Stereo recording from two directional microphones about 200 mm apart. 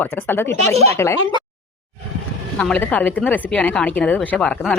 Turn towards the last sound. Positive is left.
turn(degrees=5)  # may be behind; listen again after turning